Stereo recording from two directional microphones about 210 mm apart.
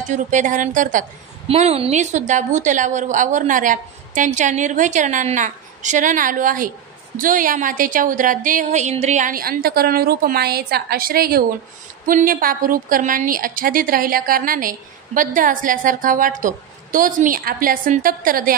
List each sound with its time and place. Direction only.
0.1 s a woman's voice: 35° right (ahead or behind)